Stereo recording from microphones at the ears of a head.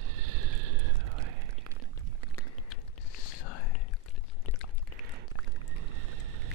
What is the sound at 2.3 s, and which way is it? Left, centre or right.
Whispering, left.